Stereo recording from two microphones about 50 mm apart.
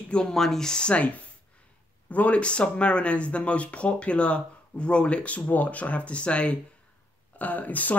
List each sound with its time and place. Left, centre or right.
0.1 s speech: centre; by 8.0 s left